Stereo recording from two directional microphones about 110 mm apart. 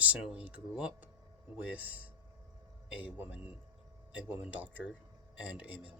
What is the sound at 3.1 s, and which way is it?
Speech, 15° right (ahead or behind).